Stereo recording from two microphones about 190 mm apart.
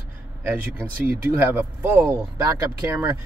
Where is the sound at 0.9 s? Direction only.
50° right (ahead or behind).